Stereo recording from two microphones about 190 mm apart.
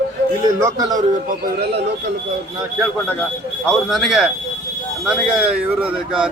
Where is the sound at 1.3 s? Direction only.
55° right (ahead or behind).